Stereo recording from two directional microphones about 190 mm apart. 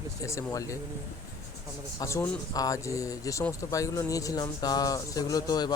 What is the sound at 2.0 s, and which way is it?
Speech, 15° left (ahead or behind).